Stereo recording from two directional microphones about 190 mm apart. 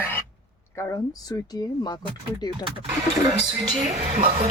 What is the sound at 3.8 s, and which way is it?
Speech, 40° right (ahead or behind).